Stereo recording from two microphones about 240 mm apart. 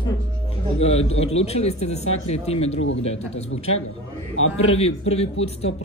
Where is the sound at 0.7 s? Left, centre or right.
Left.